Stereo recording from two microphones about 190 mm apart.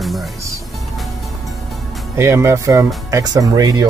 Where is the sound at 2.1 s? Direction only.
15° right (ahead or behind).